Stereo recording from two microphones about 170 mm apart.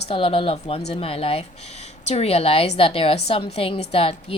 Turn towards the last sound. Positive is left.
turn(degrees=35)  # may be behind; listen again after turning